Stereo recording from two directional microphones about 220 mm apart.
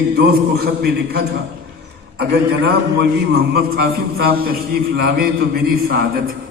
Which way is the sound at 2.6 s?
45° right (ahead or behind).